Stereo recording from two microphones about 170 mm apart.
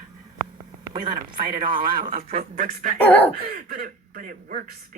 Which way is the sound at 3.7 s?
55° right (ahead or behind).